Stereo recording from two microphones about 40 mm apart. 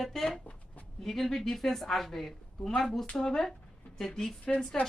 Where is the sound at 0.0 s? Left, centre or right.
Centre.